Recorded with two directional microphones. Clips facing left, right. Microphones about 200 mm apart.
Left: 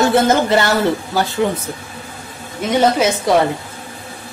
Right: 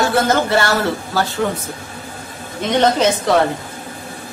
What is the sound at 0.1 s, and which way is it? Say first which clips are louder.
A woman's voice: left 2 dB; 20° left (ahead or behind).